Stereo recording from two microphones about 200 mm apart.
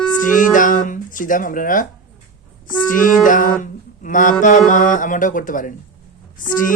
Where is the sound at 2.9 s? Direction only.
40° left (ahead or behind).